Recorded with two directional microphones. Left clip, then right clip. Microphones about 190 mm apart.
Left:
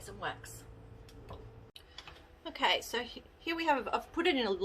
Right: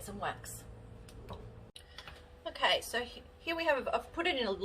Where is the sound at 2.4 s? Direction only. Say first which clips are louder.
Even; 35° left (ahead or behind).